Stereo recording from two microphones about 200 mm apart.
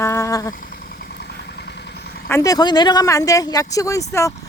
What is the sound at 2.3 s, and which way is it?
Speech, 15° left (ahead or behind).